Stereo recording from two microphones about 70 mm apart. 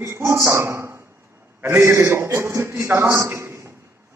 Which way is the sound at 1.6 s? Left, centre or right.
Right.